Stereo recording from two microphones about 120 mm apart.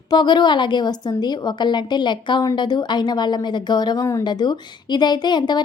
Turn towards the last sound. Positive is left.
turn(degrees=35)  # may be behind; listen again after turning